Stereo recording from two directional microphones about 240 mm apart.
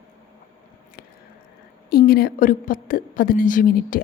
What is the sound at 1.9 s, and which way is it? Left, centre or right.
A woman's voice, left.